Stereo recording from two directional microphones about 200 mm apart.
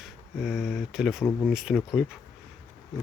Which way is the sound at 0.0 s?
5° right (ahead or behind).